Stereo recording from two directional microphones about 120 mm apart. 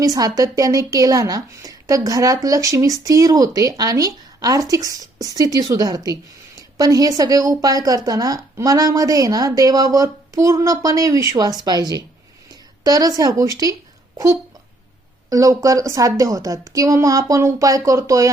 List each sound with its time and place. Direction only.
0.0 s a woman's voice: 30° right (ahead or behind)
6.6 s a sound: 30° right (ahead or behind)
7.2 s a woman's voice: 30° right (ahead or behind)
15.3 s a woman's voice: 30° right (ahead or behind)